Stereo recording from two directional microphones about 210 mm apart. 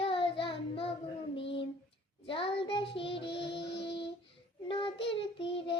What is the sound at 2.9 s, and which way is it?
Music, 25° left (ahead or behind).